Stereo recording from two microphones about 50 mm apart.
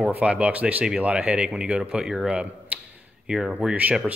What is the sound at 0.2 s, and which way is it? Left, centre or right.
Speech, right.